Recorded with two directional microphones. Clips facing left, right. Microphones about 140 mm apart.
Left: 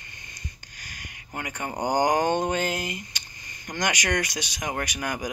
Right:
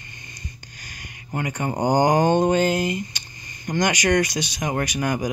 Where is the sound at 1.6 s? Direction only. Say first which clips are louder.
Right 5 dB; 20° right (ahead or behind).